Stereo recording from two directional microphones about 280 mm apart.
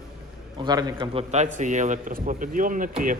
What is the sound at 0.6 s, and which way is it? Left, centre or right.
A man's voice, centre.